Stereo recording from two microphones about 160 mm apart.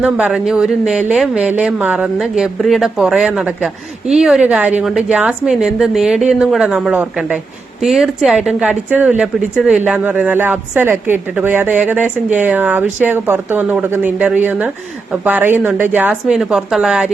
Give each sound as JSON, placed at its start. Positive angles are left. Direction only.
{"t": 0.0, "sound": "a woman's voice", "side_deg": -5}